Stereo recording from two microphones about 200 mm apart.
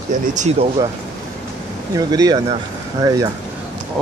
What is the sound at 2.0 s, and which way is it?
Speech, 20° right (ahead or behind).